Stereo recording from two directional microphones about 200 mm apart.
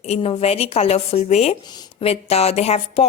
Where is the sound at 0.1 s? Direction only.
30° left (ahead or behind).